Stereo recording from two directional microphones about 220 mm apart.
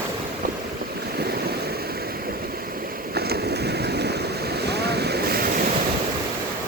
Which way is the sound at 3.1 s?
45° right (ahead or behind).